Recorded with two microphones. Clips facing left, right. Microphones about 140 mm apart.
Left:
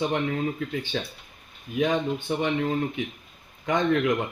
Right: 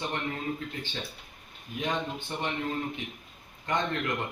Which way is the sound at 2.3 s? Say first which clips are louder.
Left 9 dB; 90° left.